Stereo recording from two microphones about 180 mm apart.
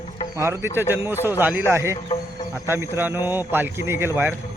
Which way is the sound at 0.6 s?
15° right (ahead or behind).